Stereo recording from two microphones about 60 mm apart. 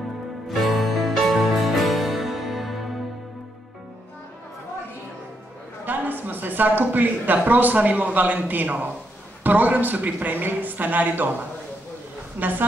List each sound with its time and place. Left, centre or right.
0.5 s music: centre
5.9 s a woman's voice: right
12.4 s a woman's voice: right